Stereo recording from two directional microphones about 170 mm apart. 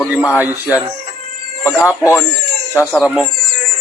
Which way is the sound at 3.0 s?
Centre (ahead or behind).